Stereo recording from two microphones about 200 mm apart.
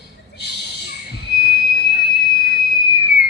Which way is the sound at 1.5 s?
55° left (ahead or behind).